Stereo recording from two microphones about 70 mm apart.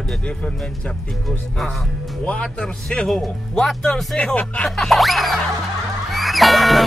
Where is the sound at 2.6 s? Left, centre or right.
Centre.